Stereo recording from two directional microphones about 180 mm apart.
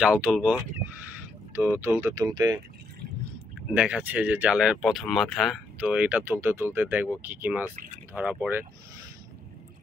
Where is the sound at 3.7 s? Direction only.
5° right (ahead or behind).